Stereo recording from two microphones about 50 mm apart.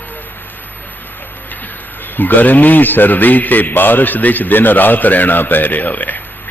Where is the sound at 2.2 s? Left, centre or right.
Left.